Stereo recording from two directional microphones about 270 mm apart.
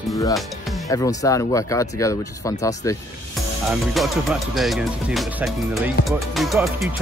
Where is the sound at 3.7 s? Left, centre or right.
Centre.